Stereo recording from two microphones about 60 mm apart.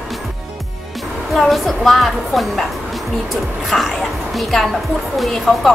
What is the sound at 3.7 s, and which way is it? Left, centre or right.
Speech, centre.